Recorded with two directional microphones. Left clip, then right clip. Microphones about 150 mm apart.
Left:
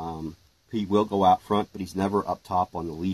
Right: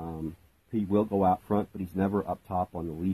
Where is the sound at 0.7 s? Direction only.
15° right (ahead or behind).